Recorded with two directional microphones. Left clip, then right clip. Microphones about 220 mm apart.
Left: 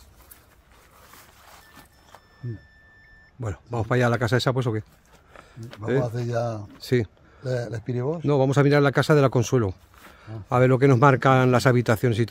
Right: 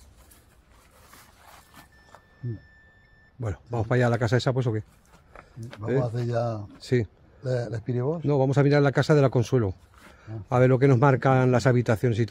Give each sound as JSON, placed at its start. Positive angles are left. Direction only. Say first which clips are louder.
{"t": 1.1, "sound": "a sound", "louder": "left 1 dB", "side_deg": 0}
{"t": 3.3, "sound": "speech", "louder": "left 1 dB", "side_deg": 5}
{"t": 5.3, "sound": "a sound", "louder": "left 1 dB", "side_deg": -5}
{"t": 6.0, "sound": "speech", "louder": "left 1 dB", "side_deg": 0}
{"t": 6.8, "sound": "speech", "louder": "left 2 dB", "side_deg": 15}
{"t": 7.4, "sound": "speech", "louder": "left 1 dB", "side_deg": 0}
{"t": 8.3, "sound": "speech", "louder": "left 3 dB", "side_deg": 15}